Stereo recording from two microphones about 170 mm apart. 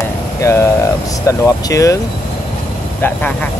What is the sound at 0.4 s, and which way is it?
Speech, 15° left (ahead or behind).